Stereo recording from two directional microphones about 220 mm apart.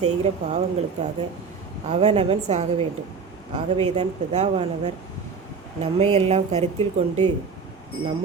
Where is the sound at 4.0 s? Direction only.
30° right (ahead or behind).